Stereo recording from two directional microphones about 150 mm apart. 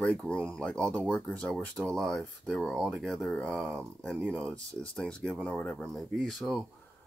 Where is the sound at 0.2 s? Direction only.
5° left (ahead or behind).